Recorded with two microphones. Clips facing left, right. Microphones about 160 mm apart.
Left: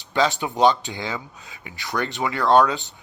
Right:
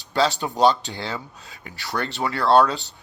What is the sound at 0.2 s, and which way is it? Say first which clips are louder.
A man's voice: even; 15° left (ahead or behind).